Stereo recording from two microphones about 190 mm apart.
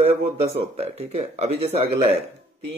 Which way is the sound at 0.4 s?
35° right (ahead or behind).